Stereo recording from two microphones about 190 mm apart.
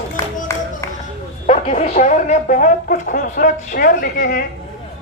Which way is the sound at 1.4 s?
40° left (ahead or behind).